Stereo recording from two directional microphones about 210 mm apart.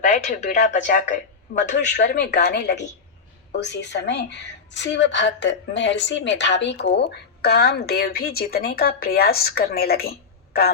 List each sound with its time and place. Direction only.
0.0 s speech: 35° left (ahead or behind)
2.0 s a woman's voice: 55° left (ahead or behind)